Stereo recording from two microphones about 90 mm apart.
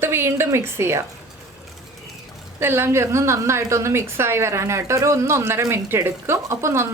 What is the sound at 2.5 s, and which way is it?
A woman's voice, 25° right (ahead or behind).